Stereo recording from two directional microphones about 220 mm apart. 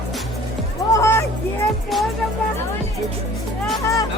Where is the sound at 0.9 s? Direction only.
15° left (ahead or behind).